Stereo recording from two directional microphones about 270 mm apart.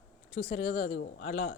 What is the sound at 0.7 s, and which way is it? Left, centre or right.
Speech, left.